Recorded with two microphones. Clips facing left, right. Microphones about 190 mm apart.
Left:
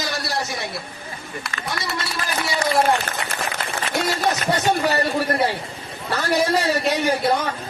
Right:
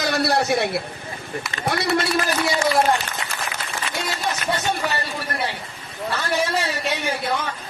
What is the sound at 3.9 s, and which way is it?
Speech, 60° left (ahead or behind).